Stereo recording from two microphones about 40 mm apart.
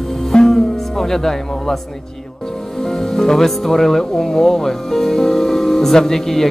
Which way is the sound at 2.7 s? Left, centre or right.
Centre.